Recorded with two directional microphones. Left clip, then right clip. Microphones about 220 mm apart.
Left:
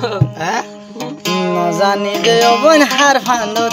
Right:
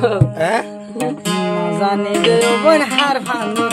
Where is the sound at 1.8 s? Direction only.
45° left (ahead or behind).